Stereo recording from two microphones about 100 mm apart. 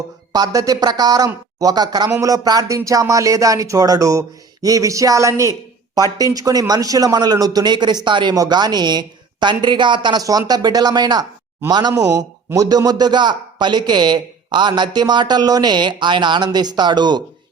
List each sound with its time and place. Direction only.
0.3 s speech: 40° right (ahead or behind)
2.0 s a man's voice: 30° right (ahead or behind)